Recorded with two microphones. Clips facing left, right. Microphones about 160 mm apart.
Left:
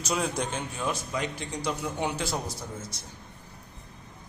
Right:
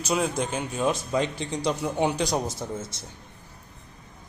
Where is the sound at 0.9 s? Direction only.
25° right (ahead or behind).